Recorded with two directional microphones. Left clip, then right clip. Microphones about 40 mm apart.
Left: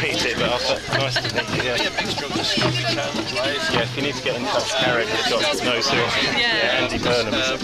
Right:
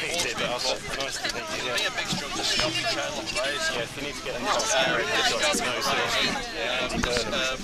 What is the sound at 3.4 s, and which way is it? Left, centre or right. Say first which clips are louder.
Speech: left 6 dB; right.